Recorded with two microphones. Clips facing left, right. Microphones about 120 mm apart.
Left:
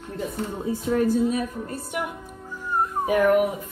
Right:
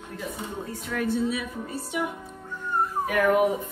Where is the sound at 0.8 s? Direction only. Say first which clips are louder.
Left 7 dB; 30° left (ahead or behind).